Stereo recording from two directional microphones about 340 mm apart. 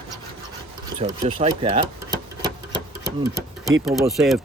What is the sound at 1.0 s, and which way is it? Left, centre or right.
Speech, centre.